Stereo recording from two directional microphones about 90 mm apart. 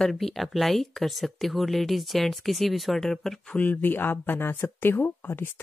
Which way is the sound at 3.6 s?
20° left (ahead or behind).